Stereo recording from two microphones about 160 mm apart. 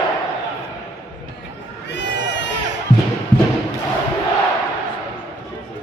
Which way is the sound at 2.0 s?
90° left.